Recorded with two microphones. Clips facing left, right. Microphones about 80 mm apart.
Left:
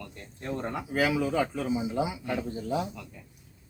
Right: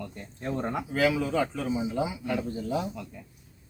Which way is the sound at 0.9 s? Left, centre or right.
Centre.